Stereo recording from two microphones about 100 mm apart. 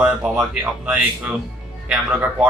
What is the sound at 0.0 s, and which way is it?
A man's voice, 10° right (ahead or behind).